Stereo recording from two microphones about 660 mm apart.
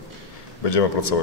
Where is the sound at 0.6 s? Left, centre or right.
Left.